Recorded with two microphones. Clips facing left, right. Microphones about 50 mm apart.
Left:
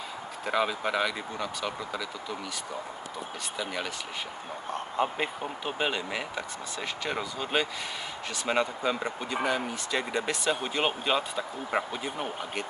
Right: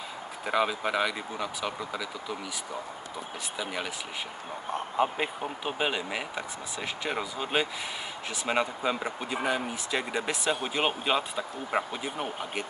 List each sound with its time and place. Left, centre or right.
0.5 s speech: centre
4.7 s speech: centre